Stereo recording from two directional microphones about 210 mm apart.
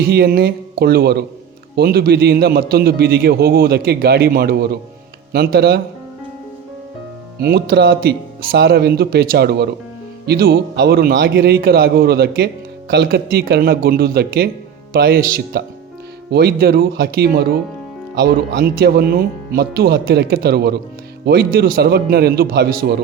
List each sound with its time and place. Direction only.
0.1 s a man's voice: 45° right (ahead or behind)
7.3 s a man's voice: 50° right (ahead or behind)